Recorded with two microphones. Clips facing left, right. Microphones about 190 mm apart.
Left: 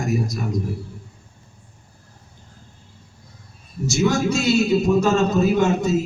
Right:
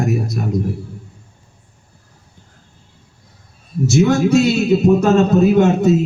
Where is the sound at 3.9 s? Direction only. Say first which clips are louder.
Right 6 dB; 60° right (ahead or behind).